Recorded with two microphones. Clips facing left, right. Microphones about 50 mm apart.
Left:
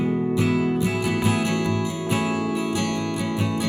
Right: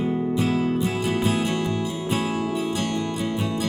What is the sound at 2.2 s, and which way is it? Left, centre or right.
Music, left.